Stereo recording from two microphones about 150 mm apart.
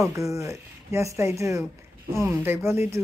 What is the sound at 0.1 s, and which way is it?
A woman's voice, 20° right (ahead or behind).